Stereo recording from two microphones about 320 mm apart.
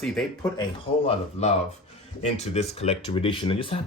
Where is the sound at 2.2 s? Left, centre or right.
Centre.